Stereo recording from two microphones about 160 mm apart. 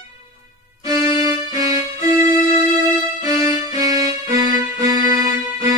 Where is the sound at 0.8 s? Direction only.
20° right (ahead or behind).